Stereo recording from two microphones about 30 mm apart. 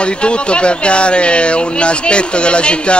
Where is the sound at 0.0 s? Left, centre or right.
Left.